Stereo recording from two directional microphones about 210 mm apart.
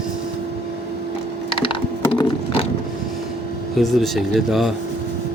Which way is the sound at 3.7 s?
Centre (ahead or behind).